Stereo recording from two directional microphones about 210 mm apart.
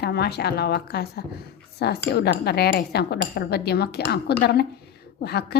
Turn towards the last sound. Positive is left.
turn(degrees=50)  # may be behind; listen again after turning